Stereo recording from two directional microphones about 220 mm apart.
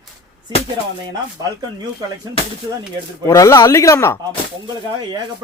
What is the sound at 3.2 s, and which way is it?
Speech, 15° left (ahead or behind).